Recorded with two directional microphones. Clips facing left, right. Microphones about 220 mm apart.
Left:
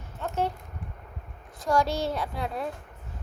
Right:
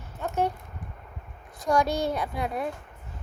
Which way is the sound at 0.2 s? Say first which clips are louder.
Right 2 dB; 15° right (ahead or behind).